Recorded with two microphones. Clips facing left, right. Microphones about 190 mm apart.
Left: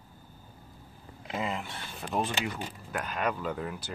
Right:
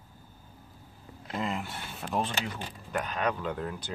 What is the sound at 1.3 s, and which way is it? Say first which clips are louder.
Speech: even; centre (ahead or behind).